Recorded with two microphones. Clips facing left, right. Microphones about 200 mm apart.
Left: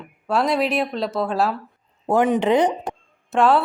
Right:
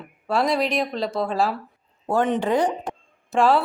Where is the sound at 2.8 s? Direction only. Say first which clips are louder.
Left 2 dB; centre (ahead or behind).